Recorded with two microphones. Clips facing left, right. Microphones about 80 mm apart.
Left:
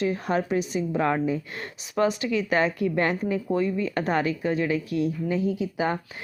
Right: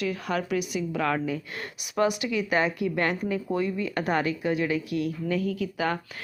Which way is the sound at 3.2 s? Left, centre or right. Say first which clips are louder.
Left 2 dB; centre.